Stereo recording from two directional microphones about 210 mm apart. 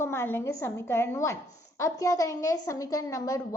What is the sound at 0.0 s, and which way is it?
A woman's voice, 10° left (ahead or behind).